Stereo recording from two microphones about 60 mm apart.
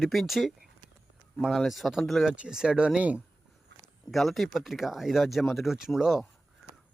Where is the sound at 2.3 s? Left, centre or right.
Centre.